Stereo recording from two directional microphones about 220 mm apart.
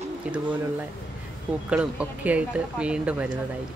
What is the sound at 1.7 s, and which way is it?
Speech, 5° right (ahead or behind).